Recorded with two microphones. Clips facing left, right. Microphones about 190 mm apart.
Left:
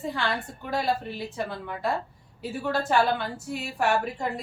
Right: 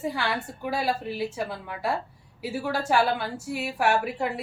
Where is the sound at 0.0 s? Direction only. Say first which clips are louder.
Right 1 dB; 10° right (ahead or behind).